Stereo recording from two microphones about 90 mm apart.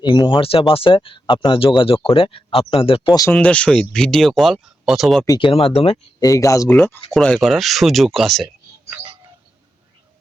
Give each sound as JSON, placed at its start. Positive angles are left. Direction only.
{"t": 0.0, "sound": "speech", "side_deg": 55}
{"t": 0.3, "sound": "speech", "side_deg": 90}
{"t": 3.3, "sound": "speech", "side_deg": 15}
{"t": 5.4, "sound": "speech", "side_deg": 90}
{"t": 6.1, "sound": "speech", "side_deg": 40}
{"t": 6.7, "sound": "speech", "side_deg": 25}
{"t": 7.1, "sound": "speech", "side_deg": 10}